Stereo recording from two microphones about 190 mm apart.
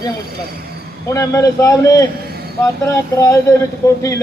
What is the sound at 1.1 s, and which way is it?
A man's voice, 15° left (ahead or behind).